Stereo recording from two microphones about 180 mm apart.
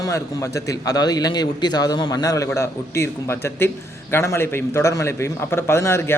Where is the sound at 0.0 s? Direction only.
20° left (ahead or behind).